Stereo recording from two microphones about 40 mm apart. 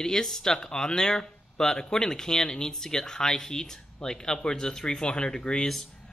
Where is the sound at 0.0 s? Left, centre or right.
Centre.